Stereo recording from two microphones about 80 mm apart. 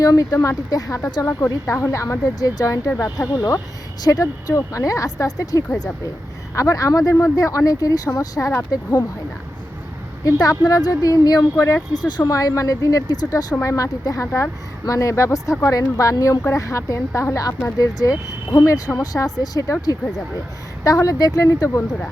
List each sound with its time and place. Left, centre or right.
0.0 s speech: left
4.0 s speech: left
10.2 s speech: left
11.9 s speech: left